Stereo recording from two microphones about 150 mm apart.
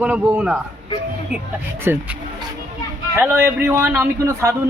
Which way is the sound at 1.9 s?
15° right (ahead or behind).